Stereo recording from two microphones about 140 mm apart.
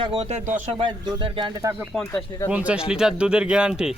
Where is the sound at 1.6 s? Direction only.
20° right (ahead or behind).